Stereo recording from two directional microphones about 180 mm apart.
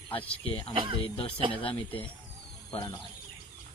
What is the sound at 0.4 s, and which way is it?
Speech, 30° left (ahead or behind).